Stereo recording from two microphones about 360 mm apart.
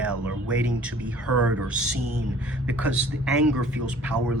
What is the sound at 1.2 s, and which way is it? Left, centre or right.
Speech, right.